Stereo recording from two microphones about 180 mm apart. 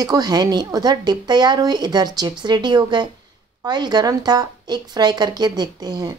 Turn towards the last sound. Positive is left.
turn(degrees=-20)  # may be behind; listen again after turning